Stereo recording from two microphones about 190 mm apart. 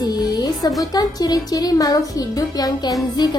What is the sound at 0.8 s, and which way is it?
Speech, 20° left (ahead or behind).